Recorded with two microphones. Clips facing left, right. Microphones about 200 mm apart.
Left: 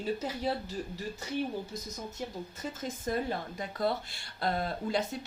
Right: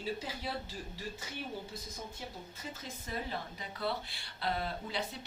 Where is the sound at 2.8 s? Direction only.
45° left (ahead or behind).